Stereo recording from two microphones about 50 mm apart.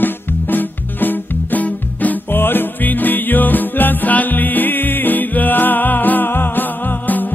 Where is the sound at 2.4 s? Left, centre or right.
Left.